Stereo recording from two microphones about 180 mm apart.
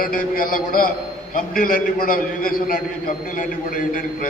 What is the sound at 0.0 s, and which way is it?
A man's voice, 50° left (ahead or behind).